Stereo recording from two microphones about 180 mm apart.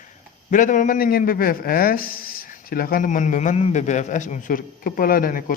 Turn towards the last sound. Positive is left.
turn(degrees=50)  # may be behind; listen again after turning